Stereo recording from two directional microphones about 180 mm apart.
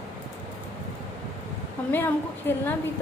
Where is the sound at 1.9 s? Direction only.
10° left (ahead or behind).